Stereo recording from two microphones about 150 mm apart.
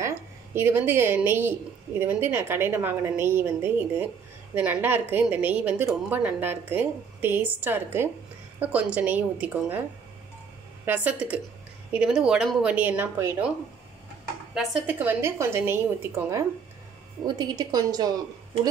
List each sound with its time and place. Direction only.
0.6 s a woman's voice: 15° right (ahead or behind)
10.9 s a woman's voice: 10° right (ahead or behind)
14.5 s a woman's voice: 5° right (ahead or behind); by 18.1 s 25° right (ahead or behind)